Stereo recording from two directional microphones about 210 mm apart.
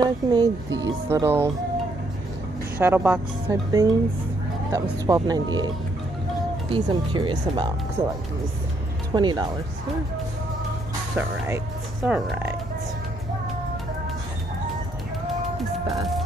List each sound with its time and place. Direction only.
0.0 s speech: 20° right (ahead or behind)
2.8 s speech: 10° right (ahead or behind)
6.7 s speech: 25° right (ahead or behind)
9.1 s speech: 20° right (ahead or behind)
11.1 s speech: 10° right (ahead or behind)